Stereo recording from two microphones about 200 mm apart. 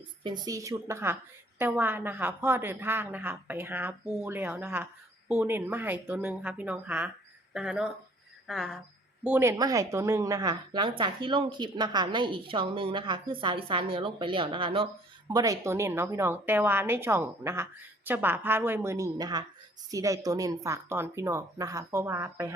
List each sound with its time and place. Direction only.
0.2 s a woman's voice: 20° right (ahead or behind); by 8.8 s centre (ahead or behind)
9.2 s a woman's voice: 10° right (ahead or behind)